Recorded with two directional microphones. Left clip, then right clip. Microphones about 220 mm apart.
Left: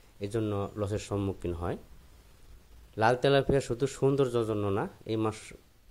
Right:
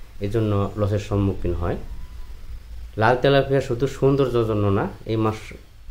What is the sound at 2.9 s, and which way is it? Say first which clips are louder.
Speech: right 7 dB; 45° left (ahead or behind).